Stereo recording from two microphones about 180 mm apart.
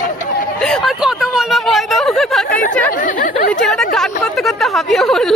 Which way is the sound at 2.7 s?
45° left (ahead or behind).